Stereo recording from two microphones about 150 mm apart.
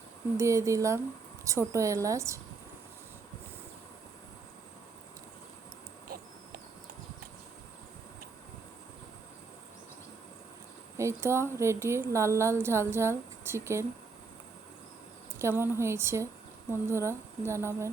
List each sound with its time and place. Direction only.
0.3 s a woman's voice: 20° right (ahead or behind)
6.1 s a sound: 85° right
10.9 s a woman's voice: 20° right (ahead or behind)
15.4 s a woman's voice: 15° right (ahead or behind)